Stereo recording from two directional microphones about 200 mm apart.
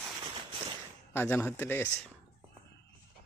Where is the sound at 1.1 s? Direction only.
10° left (ahead or behind).